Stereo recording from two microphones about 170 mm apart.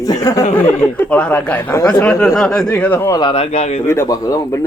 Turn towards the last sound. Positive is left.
turn(degrees=20)  # may be behind; listen again after turning